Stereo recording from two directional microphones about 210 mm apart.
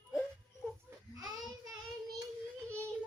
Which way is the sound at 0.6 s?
5° left (ahead or behind).